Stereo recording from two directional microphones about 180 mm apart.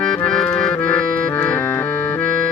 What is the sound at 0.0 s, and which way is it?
Accordion, 5° left (ahead or behind).